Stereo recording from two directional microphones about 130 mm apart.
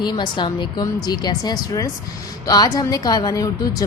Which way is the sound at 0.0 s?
35° left (ahead or behind).